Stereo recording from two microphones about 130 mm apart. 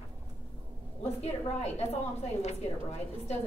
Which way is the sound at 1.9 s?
60° left (ahead or behind).